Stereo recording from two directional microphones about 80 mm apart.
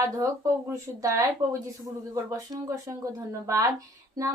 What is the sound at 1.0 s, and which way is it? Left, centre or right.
Speech, right.